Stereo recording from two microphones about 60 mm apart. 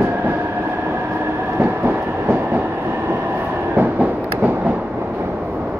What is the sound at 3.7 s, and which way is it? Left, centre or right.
Train, right.